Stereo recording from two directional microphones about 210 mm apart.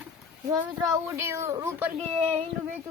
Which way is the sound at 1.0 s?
15° right (ahead or behind).